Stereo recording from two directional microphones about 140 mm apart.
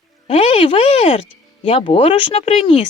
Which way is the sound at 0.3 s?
45° left (ahead or behind).